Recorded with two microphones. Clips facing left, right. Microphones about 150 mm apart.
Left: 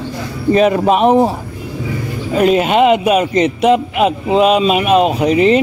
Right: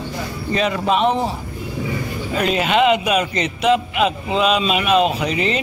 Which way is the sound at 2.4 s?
50° left (ahead or behind).